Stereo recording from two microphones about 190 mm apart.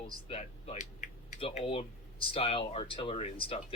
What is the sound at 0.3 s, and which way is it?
Speech, 35° left (ahead or behind).